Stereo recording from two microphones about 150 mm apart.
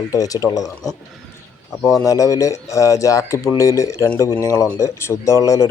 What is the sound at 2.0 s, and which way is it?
Speech, 20° left (ahead or behind).